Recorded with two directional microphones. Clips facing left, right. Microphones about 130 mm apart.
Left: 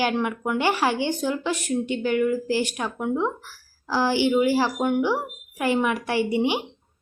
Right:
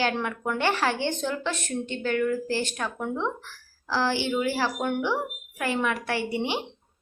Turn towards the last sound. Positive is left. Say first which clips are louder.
# left 5 dB
turn(degrees=15)  # may be behind; listen again after turning